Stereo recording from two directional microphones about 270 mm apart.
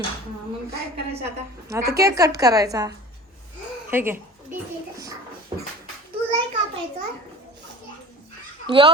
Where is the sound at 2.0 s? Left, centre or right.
Centre.